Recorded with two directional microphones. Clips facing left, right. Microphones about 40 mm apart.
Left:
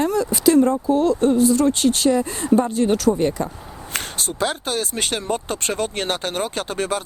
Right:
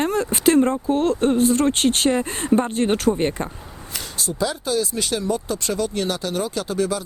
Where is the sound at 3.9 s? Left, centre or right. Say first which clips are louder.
Left 2 dB; left.